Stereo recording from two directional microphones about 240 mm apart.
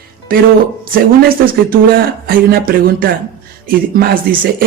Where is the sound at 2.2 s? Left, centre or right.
Right.